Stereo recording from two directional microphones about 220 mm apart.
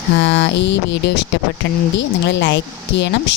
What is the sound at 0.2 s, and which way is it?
A woman's voice, 55° left (ahead or behind).